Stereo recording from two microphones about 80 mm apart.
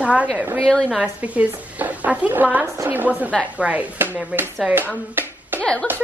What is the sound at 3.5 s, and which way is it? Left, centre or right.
Chopping, centre.